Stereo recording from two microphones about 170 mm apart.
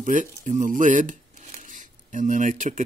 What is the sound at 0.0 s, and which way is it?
Speech, 50° right (ahead or behind).